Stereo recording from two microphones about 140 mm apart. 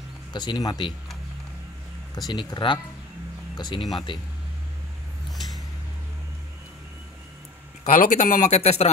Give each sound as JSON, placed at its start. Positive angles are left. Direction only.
{"t": 0.3, "sound": "speech", "side_deg": 30}
{"t": 2.2, "sound": "speech", "side_deg": 30}
{"t": 7.8, "sound": "speech", "side_deg": 70}